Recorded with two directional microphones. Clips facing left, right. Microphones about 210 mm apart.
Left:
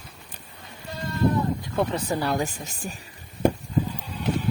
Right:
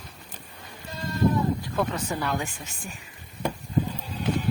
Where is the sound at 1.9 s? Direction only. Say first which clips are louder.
Left 3 dB; 35° left (ahead or behind).